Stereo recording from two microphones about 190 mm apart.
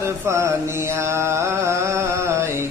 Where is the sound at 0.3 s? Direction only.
15° right (ahead or behind).